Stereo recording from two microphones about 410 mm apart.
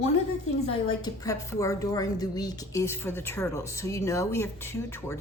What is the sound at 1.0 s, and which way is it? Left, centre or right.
A woman's voice, centre.